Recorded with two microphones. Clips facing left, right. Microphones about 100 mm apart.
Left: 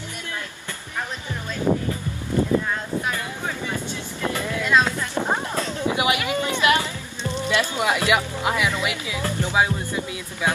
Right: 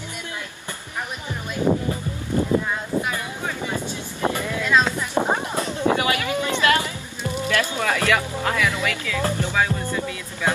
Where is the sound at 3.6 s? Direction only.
15° right (ahead or behind).